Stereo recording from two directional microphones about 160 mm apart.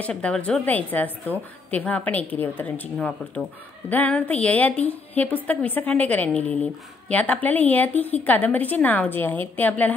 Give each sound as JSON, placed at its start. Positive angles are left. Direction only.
{"t": 0.0, "sound": "a woman's voice", "side_deg": 5}